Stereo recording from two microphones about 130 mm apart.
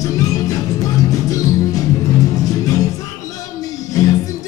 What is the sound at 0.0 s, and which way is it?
Music, 30° left (ahead or behind).